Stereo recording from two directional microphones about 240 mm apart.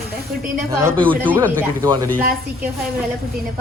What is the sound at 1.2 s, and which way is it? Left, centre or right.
Speech, centre.